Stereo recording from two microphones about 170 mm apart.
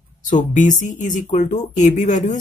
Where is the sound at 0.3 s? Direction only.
50° left (ahead or behind).